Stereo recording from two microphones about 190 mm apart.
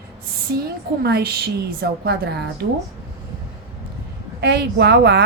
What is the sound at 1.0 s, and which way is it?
A woman's voice, 60° right (ahead or behind).